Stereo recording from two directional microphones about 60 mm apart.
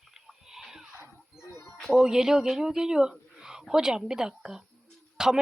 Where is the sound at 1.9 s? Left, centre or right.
Centre.